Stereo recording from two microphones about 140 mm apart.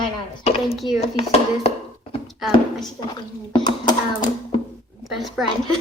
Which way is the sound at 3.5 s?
30° left (ahead or behind).